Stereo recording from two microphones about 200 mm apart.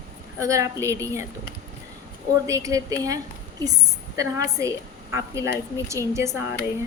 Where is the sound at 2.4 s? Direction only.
15° right (ahead or behind).